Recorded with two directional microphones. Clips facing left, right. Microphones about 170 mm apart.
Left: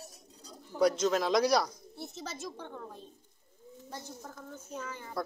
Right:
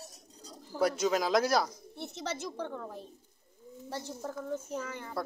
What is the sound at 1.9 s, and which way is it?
A woman's voice, 75° right (ahead or behind).